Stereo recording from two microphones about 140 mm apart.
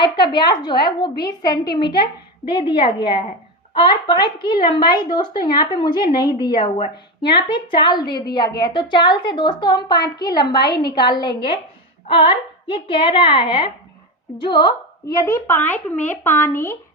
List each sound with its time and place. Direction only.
0.0 s a woman's voice: 30° left (ahead or behind)
15.0 s speech: 25° left (ahead or behind)